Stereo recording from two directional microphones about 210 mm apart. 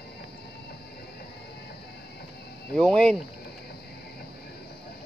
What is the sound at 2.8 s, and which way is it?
Speech, 5° left (ahead or behind).